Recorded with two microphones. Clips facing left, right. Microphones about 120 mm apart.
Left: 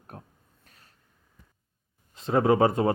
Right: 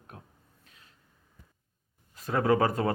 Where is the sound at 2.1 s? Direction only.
25° left (ahead or behind).